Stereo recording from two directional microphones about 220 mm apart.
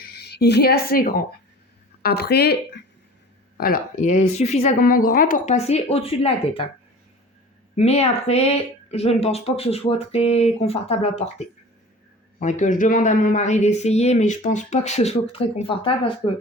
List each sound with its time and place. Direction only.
0.1 s a woman's voice: 45° left (ahead or behind)
3.6 s a man's voice: 40° left (ahead or behind)
7.8 s a woman's voice: 30° left (ahead or behind)